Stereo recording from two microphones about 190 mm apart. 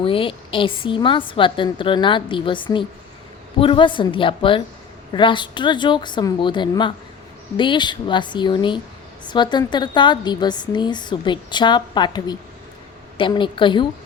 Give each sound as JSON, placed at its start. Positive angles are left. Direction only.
{"t": 0.0, "sound": "a woman's voice", "side_deg": 30}